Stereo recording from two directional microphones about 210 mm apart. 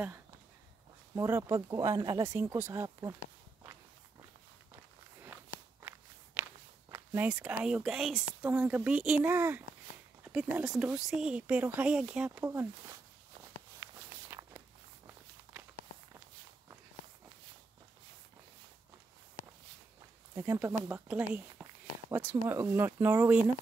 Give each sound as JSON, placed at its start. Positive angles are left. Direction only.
{"t": 1.1, "sound": "speech", "side_deg": -15}
{"t": 5.8, "sound": "walk", "side_deg": -10}
{"t": 7.6, "sound": "speech", "side_deg": -5}
{"t": 14.3, "sound": "walk", "side_deg": -15}
{"t": 20.3, "sound": "speech", "side_deg": -10}